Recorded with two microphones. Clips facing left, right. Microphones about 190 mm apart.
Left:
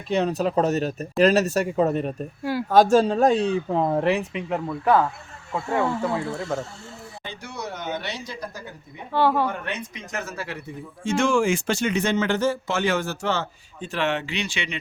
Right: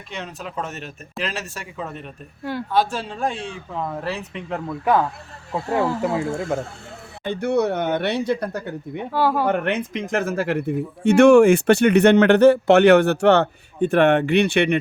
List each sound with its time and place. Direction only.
0.1 s speech: 35° left (ahead or behind)
2.4 s speech: 5° left (ahead or behind)
2.7 s speech: 45° left (ahead or behind)
4.0 s speech: 15° left (ahead or behind)
5.5 s speech: 35° right (ahead or behind)
6.2 s speech: 50° right (ahead or behind)
9.1 s speech: 5° right (ahead or behind)
9.5 s speech: 65° right (ahead or behind)